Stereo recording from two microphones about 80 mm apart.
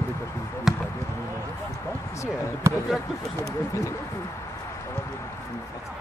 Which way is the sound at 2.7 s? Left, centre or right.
Right.